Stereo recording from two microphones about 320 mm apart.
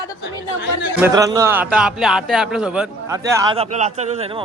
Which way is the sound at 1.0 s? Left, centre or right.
Centre.